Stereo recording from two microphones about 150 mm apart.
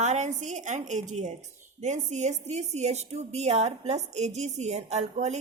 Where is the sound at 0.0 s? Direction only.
50° right (ahead or behind).